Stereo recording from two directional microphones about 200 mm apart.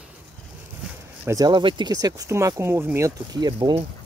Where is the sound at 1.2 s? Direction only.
15° right (ahead or behind).